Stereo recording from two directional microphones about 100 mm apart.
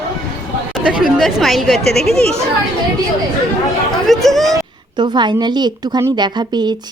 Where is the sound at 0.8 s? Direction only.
10° right (ahead or behind).